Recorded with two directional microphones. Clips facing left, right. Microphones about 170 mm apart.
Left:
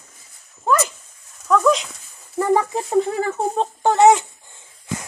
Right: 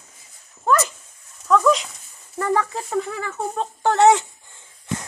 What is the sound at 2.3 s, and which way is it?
Speech, 15° left (ahead or behind).